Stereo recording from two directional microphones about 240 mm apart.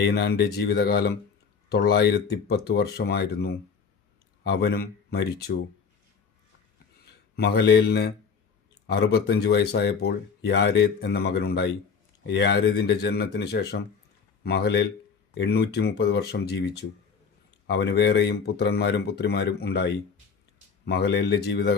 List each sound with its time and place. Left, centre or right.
0.0 s speech: left
7.3 s speech: left